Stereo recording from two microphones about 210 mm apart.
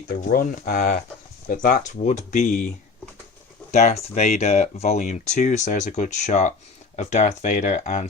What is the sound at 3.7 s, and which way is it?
Speech, 30° left (ahead or behind).